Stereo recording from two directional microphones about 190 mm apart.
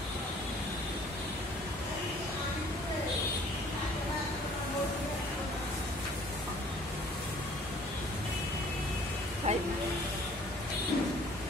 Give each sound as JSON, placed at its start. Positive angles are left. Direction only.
{"t": 9.5, "sound": "vehicle", "side_deg": -35}